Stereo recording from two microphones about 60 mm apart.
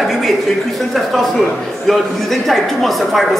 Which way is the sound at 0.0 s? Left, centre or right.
Centre.